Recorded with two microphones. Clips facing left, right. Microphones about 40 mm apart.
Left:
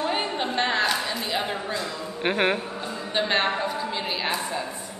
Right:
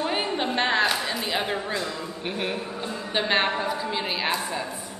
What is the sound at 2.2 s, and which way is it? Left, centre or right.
Speech, left.